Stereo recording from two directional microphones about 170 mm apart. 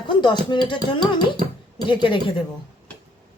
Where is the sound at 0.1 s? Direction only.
25° left (ahead or behind).